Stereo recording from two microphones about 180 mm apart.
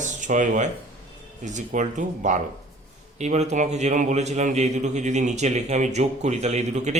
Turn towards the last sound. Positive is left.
turn(degrees=-40)  # may be behind; listen again after turning